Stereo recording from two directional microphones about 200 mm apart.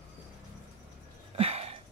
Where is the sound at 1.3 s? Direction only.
30° right (ahead or behind).